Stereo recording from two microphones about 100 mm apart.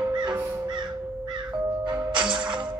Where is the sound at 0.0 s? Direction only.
50° right (ahead or behind).